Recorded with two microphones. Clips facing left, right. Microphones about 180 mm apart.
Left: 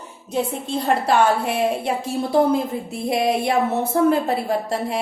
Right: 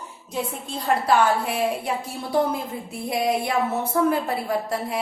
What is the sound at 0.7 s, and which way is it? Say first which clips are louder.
A woman's voice: left 2 dB; 25° left (ahead or behind).